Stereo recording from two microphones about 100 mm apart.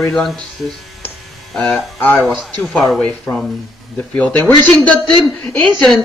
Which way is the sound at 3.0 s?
15° left (ahead or behind).